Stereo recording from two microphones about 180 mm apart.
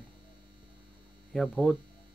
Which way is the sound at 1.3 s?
5° left (ahead or behind).